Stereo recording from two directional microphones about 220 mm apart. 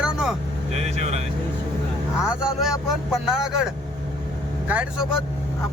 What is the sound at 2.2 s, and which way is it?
Speech, 5° right (ahead or behind).